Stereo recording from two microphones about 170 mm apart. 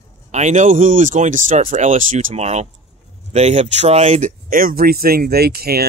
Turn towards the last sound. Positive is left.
turn(degrees=-65)  # may be behind; listen again after turning